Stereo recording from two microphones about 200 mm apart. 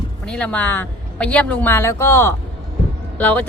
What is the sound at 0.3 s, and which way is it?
Speech, 5° left (ahead or behind).